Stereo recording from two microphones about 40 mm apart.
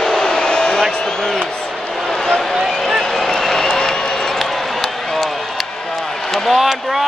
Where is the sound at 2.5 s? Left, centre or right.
Centre.